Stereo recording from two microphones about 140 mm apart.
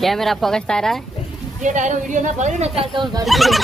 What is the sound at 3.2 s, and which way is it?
Speech, centre (ahead or behind).